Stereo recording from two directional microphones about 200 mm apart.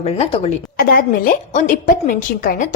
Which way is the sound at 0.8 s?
45° left (ahead or behind).